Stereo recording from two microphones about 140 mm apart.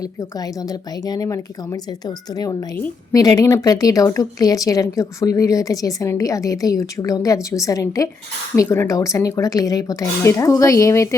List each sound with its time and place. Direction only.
0.0 s speech: 25° left (ahead or behind)